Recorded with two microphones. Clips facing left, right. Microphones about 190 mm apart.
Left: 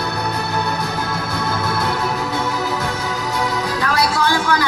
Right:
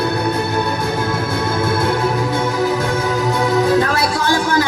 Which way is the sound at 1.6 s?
50° right (ahead or behind).